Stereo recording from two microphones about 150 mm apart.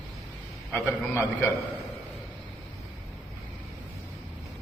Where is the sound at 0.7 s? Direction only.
10° left (ahead or behind).